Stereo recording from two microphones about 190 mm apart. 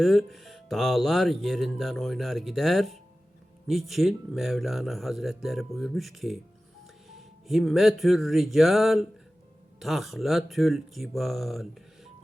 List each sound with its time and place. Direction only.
0.0 s speech: centre (ahead or behind)
7.1 s music: centre (ahead or behind)
9.8 s speech: centre (ahead or behind)